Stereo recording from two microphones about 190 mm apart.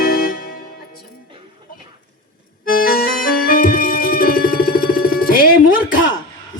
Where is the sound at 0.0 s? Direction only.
50° left (ahead or behind).